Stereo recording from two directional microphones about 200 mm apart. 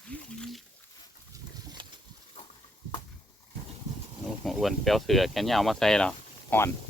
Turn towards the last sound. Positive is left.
turn(degrees=5)  # may be behind; listen again after turning